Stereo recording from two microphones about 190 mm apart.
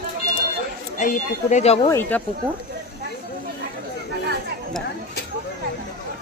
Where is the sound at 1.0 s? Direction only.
40° left (ahead or behind).